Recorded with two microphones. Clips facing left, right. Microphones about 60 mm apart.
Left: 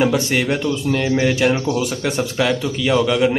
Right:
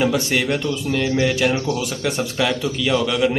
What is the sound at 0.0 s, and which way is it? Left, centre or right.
A man's voice, centre.